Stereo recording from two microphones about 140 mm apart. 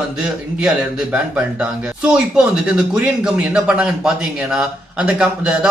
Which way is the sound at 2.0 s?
5° right (ahead or behind).